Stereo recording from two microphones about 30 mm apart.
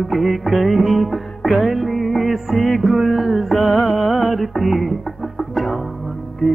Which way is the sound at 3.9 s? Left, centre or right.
Left.